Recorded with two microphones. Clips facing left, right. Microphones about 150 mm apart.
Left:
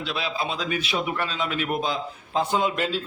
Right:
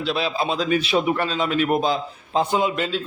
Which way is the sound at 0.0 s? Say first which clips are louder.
Right 5 dB; 35° right (ahead or behind).